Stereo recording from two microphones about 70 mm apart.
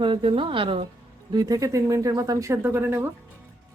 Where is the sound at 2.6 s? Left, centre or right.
Right.